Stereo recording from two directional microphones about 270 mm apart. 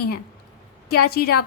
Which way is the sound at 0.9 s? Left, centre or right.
Left.